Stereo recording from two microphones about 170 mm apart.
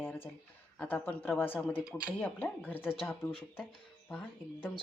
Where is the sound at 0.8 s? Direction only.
10° left (ahead or behind).